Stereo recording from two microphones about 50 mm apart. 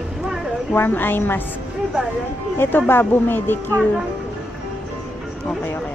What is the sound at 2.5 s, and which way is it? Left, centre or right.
Speech, left.